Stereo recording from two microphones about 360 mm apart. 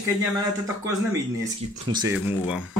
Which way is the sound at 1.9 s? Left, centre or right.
Centre.